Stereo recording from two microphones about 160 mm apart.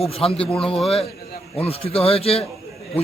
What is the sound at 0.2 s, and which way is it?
Speech, 35° left (ahead or behind).